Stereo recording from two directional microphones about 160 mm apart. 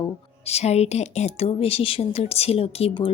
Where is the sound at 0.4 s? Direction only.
40° left (ahead or behind).